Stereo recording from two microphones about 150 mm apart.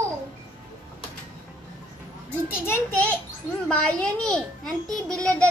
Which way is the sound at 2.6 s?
15° left (ahead or behind).